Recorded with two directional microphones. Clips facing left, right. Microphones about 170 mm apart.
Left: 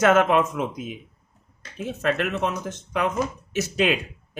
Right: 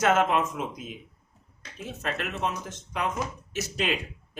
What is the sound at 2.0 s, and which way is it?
Speech, 65° left (ahead or behind).